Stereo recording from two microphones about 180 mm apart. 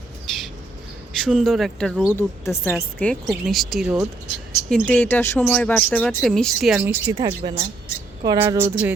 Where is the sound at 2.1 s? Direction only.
10° left (ahead or behind).